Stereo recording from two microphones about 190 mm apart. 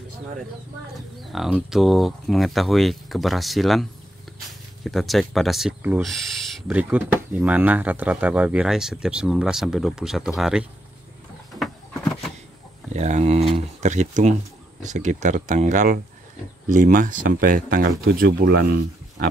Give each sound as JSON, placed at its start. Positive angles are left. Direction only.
{"t": 1.2, "sound": "speech", "side_deg": 0}
{"t": 11.6, "sound": "a sound", "side_deg": 5}
{"t": 12.9, "sound": "speech", "side_deg": -35}